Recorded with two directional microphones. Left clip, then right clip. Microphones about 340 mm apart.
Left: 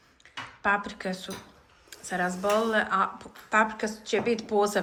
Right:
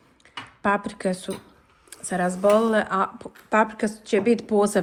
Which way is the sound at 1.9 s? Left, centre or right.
Centre.